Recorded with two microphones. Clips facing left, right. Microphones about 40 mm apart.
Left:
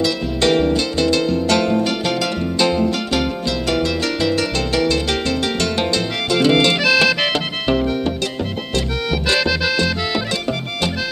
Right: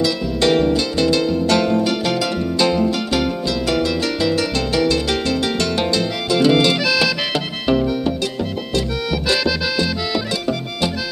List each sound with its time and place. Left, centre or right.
0.0 s music: centre
2.6 s music: centre
6.3 s music: left
9.1 s accordion: left